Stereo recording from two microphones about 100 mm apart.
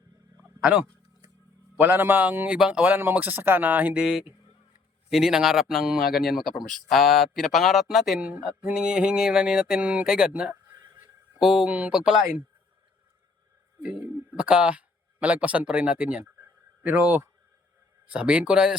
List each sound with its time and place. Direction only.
0.4 s a sound: 15° right (ahead or behind)
1.7 s a man's voice: 20° right (ahead or behind); by 8.3 s centre (ahead or behind)
8.3 s a man's voice: 15° right (ahead or behind)
10.8 s dog: 20° right (ahead or behind)
11.3 s a man's voice: 5° right (ahead or behind)
13.8 s a man's voice: 10° right (ahead or behind)
16.2 s a sound: 20° right (ahead or behind)
18.0 s a man's voice: 10° right (ahead or behind)